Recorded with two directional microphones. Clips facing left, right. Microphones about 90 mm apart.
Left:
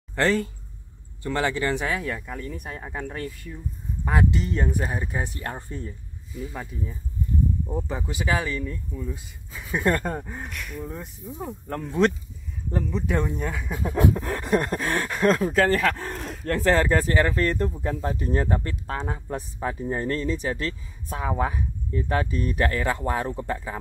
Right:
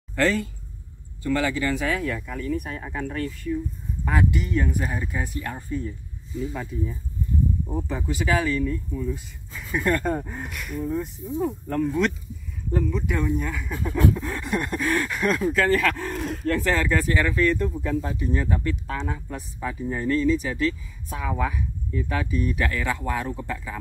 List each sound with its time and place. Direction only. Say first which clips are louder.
0.1 s speech: even; 30° left (ahead or behind)
7.9 s speech: right 3 dB; 15° left (ahead or behind)
10.1 s speech: right 3 dB; 5° left (ahead or behind)
10.9 s speech: right 8 dB; 10° left (ahead or behind)
11.7 s speech: left 2 dB; 25° left (ahead or behind)
13.1 s speech: left 1 dB; 30° left (ahead or behind)
14.1 s speech: left 3 dB; 45° left (ahead or behind)
15.7 s speech: right 1 dB; 30° left (ahead or behind)
16.1 s a sound: right 4 dB; centre (ahead or behind)
16.4 s speech: left 3 dB; 40° left (ahead or behind)